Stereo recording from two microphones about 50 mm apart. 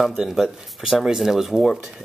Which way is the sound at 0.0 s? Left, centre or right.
Centre.